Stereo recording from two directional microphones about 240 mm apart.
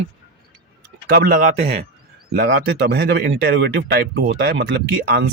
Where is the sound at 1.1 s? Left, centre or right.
Right.